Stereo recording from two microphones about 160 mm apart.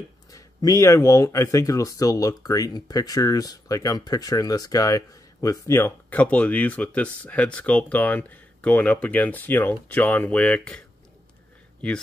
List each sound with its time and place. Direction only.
0.3 s speech: 20° left (ahead or behind); by 10.8 s 5° left (ahead or behind)